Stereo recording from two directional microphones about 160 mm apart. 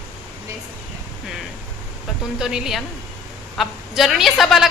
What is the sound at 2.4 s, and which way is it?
A woman's voice, 5° right (ahead or behind).